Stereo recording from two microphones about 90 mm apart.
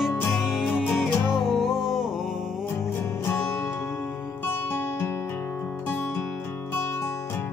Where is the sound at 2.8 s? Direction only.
25° left (ahead or behind).